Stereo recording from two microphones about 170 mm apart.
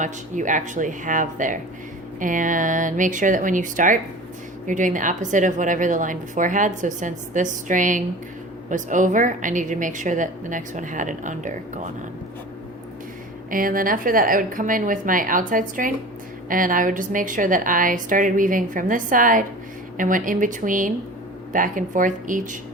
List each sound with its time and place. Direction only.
0.0 s a woman's voice: 50° right (ahead or behind)
13.5 s a woman's voice: 55° right (ahead or behind)